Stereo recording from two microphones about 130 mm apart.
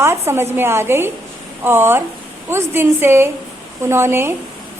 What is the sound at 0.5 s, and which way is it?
A woman's voice, 20° right (ahead or behind).